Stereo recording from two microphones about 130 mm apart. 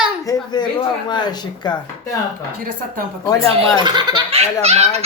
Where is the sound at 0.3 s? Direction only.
35° left (ahead or behind).